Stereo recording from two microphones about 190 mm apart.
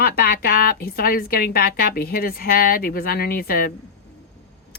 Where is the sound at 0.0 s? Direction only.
50° left (ahead or behind).